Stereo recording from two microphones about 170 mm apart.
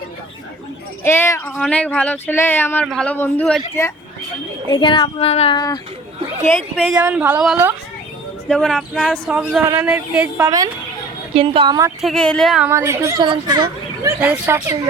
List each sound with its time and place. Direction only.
1.0 s a man's voice: 15° left (ahead or behind)
4.7 s child singing: 30° left (ahead or behind)
5.5 s speech: 25° left (ahead or behind)
7.0 s speech: 10° right (ahead or behind)
8.4 s a man's voice: 5° left (ahead or behind)
11.3 s speech: 30° right (ahead or behind)
12.0 s a man's voice: 5° left (ahead or behind)
12.6 s speech: 15° right (ahead or behind)